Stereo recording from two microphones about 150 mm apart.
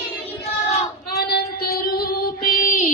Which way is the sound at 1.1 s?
90° left.